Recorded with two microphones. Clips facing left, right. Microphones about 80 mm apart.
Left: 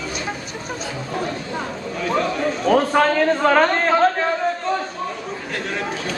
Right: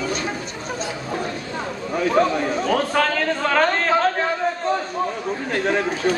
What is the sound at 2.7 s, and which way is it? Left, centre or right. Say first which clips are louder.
Speech: left 6 dB; centre.